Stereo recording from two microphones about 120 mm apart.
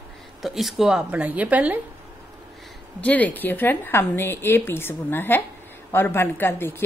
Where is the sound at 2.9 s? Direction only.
10° left (ahead or behind).